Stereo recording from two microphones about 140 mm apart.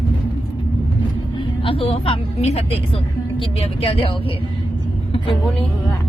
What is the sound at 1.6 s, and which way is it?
Speech, 40° left (ahead or behind).